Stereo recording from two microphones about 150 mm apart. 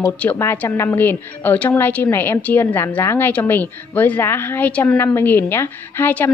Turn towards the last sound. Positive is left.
turn(degrees=15)  # may be behind; listen again after turning